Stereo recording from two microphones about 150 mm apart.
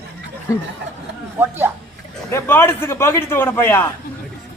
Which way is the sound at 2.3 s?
15° left (ahead or behind).